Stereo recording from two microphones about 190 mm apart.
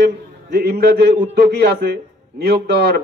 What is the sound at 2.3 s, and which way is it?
Speech, 60° right (ahead or behind).